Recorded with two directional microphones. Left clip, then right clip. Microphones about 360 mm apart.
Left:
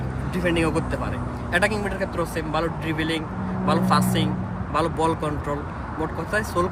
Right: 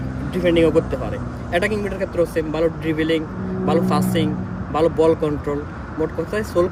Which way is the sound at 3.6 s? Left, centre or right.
Centre.